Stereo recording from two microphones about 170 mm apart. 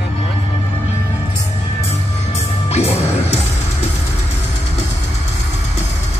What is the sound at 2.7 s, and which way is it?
Music, 35° left (ahead or behind).